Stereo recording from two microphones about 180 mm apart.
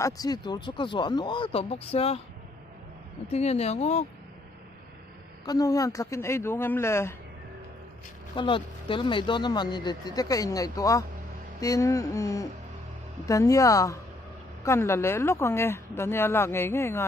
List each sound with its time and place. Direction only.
0.0 s speech: 20° left (ahead or behind)
3.3 s speech: 35° left (ahead or behind)
5.4 s a woman's voice: 20° left (ahead or behind)
8.4 s a woman's voice: 30° left (ahead or behind)